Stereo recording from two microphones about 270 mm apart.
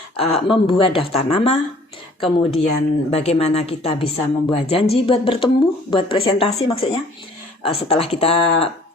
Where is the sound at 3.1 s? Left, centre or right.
Left.